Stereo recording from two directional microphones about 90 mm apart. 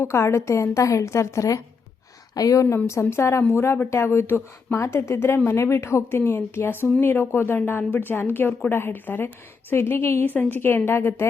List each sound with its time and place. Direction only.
0.0 s a woman's voice: 30° left (ahead or behind)